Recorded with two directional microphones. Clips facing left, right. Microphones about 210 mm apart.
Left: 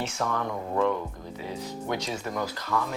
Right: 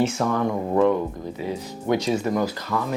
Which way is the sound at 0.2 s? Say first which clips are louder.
Right 6 dB; 25° right (ahead or behind).